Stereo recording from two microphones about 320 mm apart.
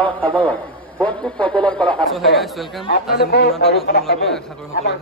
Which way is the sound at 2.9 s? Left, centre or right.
Left.